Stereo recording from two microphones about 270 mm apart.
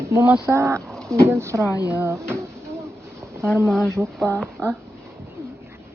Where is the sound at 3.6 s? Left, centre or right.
Centre.